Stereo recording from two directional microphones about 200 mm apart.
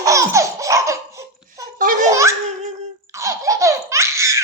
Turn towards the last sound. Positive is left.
turn(degrees=-15)  # may be behind; listen again after turning